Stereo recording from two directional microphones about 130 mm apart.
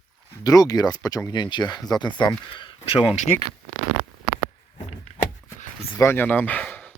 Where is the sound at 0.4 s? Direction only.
30° left (ahead or behind).